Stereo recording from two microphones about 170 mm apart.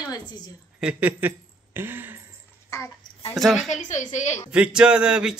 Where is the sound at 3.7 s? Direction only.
45° left (ahead or behind).